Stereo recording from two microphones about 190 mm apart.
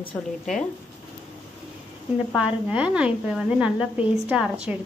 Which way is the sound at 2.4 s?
5° right (ahead or behind).